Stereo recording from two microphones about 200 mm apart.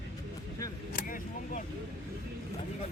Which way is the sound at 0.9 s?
45° left (ahead or behind).